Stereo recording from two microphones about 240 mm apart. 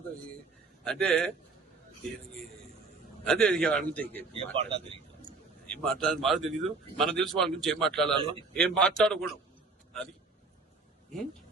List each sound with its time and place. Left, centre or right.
0.9 s speech: centre
3.2 s speech: centre
4.5 s speech: right
5.6 s speech: centre
8.1 s speech: right
8.5 s speech: centre